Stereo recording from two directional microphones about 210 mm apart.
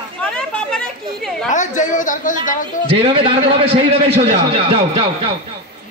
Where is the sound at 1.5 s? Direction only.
35° left (ahead or behind).